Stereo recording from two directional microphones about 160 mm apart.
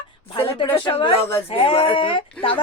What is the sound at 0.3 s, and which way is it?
A woman's voice, 30° left (ahead or behind).